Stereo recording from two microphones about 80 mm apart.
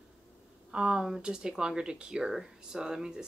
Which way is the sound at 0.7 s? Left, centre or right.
Centre.